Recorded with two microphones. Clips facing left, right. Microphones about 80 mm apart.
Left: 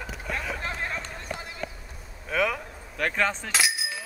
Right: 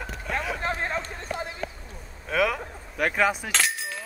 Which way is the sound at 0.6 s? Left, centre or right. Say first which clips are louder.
Right 4 dB; right.